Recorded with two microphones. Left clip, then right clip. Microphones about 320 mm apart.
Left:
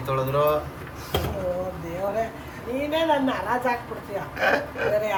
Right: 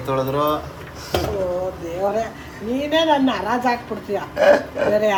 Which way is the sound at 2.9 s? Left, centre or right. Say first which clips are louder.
Right 6 dB; right.